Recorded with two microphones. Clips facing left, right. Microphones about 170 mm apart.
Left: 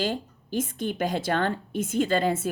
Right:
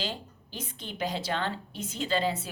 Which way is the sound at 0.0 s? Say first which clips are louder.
Left 8 dB; 50° left (ahead or behind).